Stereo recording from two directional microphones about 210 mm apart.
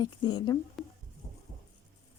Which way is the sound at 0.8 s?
Centre (ahead or behind).